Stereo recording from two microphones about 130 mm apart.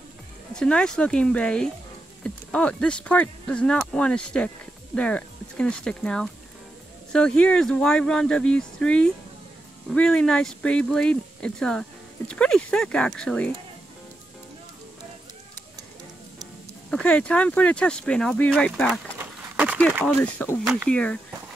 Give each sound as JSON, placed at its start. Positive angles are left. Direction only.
{"t": 0.6, "sound": "speech", "side_deg": 5}
{"t": 17.0, "sound": "speech", "side_deg": 10}
{"t": 19.1, "sound": "a sound", "side_deg": -10}
{"t": 20.4, "sound": "speech", "side_deg": 15}